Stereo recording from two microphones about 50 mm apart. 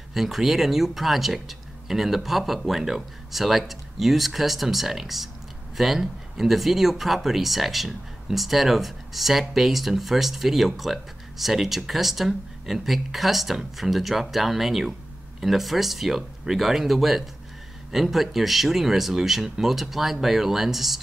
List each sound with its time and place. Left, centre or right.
0.1 s speech: centre